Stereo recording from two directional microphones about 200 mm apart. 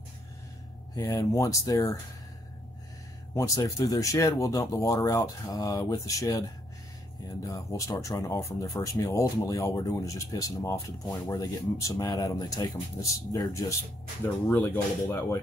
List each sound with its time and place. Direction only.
0.9 s speech: 15° left (ahead or behind)
3.3 s speech: 15° left (ahead or behind)